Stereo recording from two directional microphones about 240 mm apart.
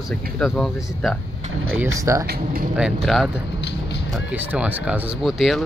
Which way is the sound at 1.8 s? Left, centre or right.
Centre.